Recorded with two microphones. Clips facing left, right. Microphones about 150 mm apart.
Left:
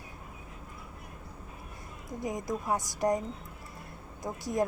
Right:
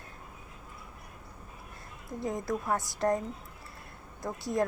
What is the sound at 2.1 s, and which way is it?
A woman's voice, 15° left (ahead or behind).